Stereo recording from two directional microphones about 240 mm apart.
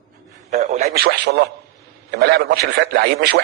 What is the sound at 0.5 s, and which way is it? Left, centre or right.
Speech, right.